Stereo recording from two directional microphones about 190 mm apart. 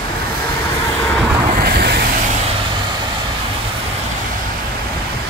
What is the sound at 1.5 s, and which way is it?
Vehicle, 55° right (ahead or behind).